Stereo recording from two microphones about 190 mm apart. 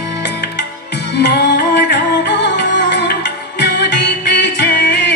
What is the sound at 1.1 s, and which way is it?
Music, 65° left (ahead or behind).